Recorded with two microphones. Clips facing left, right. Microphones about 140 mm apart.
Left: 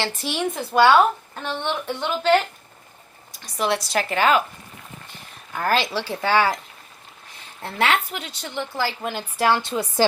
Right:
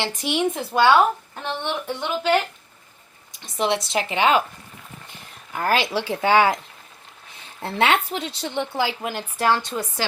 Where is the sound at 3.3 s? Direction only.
25° right (ahead or behind).